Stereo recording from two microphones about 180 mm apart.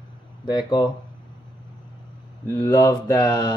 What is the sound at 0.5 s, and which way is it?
Mantra, 25° left (ahead or behind).